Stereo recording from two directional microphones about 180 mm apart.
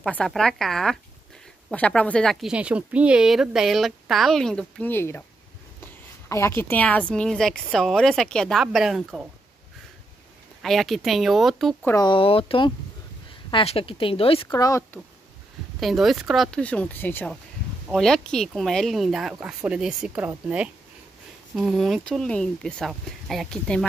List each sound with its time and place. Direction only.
0.0 s a woman's voice: centre (ahead or behind)
10.6 s a woman's voice: centre (ahead or behind)
11.9 s speech: 25° left (ahead or behind)
14.5 s speech: 20° left (ahead or behind)
15.8 s a woman's voice: centre (ahead or behind)